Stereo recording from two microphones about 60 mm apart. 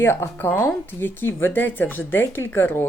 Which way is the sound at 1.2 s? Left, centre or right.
Left.